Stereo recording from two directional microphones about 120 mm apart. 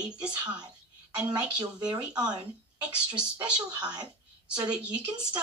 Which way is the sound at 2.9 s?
10° right (ahead or behind).